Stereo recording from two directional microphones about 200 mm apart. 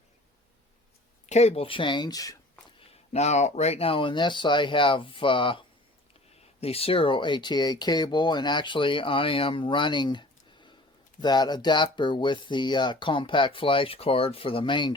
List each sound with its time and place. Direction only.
1.3 s speech: 35° left (ahead or behind); by 2.4 s 15° left (ahead or behind)
3.1 s speech: 35° left (ahead or behind)